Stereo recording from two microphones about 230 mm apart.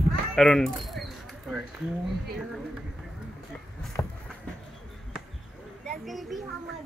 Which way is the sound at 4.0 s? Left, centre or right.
Centre.